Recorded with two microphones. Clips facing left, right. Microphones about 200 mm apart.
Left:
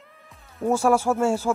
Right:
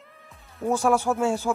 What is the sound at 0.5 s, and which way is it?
Speech, 5° left (ahead or behind).